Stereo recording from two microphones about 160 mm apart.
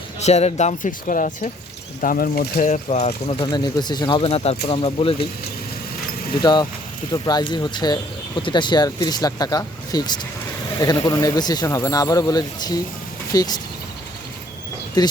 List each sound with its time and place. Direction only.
0.2 s speech: 45° left (ahead or behind); by 2.6 s 70° left (ahead or behind)
2.6 s speech: 45° left (ahead or behind)
3.4 s speech: 25° left (ahead or behind)
6.4 s speech: 30° left (ahead or behind)
15.0 s speech: 25° left (ahead or behind)